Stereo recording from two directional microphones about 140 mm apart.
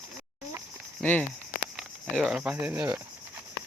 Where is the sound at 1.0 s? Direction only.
10° left (ahead or behind).